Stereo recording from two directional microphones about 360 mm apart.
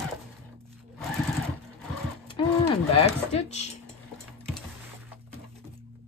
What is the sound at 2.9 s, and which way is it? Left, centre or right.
Speech, centre.